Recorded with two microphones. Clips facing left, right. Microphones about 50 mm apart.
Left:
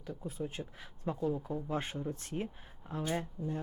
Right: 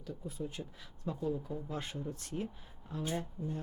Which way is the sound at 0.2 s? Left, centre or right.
Left.